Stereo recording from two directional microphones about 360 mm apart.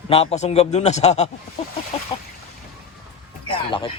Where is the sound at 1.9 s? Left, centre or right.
Centre.